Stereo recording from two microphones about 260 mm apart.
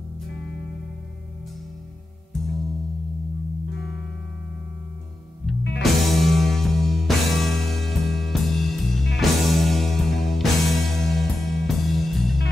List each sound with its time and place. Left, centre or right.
5.8 s music: centre